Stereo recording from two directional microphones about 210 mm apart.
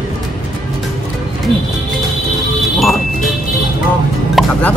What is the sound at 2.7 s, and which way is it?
Music, centre (ahead or behind).